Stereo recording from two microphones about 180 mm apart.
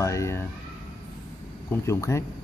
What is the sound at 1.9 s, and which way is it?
Speech, 15° left (ahead or behind).